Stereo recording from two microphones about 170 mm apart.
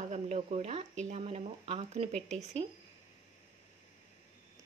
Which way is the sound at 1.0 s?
35° right (ahead or behind).